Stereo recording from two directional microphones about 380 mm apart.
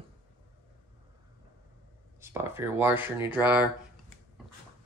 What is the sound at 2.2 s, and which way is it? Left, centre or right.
Speech, centre.